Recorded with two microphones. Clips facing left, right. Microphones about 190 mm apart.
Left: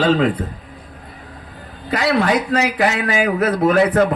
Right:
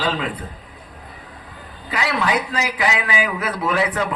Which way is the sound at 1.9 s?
40° left (ahead or behind).